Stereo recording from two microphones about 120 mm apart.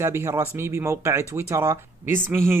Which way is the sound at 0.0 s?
25° right (ahead or behind).